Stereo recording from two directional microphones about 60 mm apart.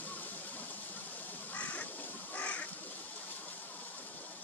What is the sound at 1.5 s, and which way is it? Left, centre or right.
Crow, left.